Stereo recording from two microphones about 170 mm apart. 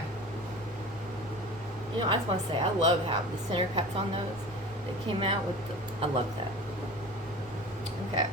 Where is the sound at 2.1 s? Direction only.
30° right (ahead or behind).